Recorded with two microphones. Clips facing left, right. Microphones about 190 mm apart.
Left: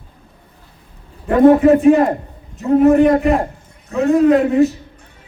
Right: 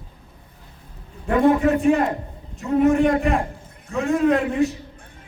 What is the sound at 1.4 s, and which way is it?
Speech, 40° left (ahead or behind).